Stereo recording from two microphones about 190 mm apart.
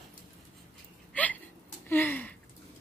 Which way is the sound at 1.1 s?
10° left (ahead or behind).